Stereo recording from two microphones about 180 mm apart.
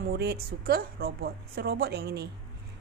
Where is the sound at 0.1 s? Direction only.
60° right (ahead or behind).